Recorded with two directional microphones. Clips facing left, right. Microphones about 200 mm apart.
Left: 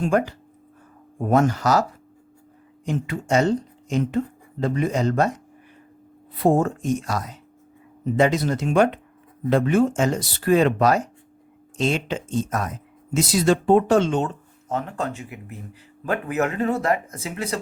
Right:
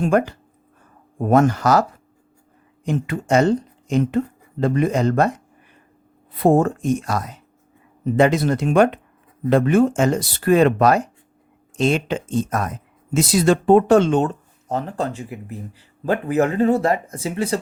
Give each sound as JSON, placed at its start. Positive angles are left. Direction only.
{"t": 0.0, "sound": "speech", "side_deg": -55}
{"t": 2.8, "sound": "speech", "side_deg": -55}
{"t": 6.4, "sound": "speech", "side_deg": -55}
{"t": 14.7, "sound": "speech", "side_deg": -35}